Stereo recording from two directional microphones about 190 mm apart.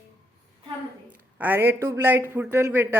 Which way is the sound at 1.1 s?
10° right (ahead or behind).